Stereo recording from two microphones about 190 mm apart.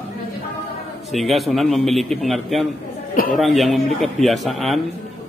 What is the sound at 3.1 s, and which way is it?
Speech, 45° left (ahead or behind).